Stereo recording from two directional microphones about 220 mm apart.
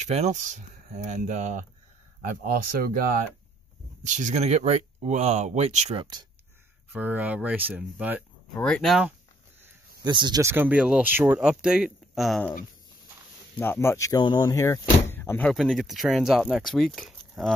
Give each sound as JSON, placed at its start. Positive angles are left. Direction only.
{"t": 0.0, "sound": "speech", "side_deg": -30}
{"t": 6.9, "sound": "speech", "side_deg": -5}
{"t": 8.5, "sound": "speech", "side_deg": 5}
{"t": 10.0, "sound": "speech", "side_deg": -20}
{"t": 13.6, "sound": "speech", "side_deg": 10}